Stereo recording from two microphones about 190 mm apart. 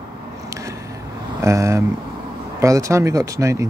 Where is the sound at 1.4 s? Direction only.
15° right (ahead or behind).